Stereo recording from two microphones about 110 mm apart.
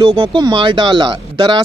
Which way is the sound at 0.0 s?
50° right (ahead or behind).